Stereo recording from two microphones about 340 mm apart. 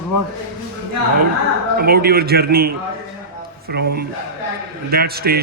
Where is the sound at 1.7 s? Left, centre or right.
Right.